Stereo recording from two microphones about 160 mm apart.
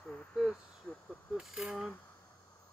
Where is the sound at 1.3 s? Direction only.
5° right (ahead or behind).